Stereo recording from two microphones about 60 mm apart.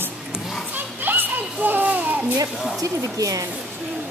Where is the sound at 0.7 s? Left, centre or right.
Right.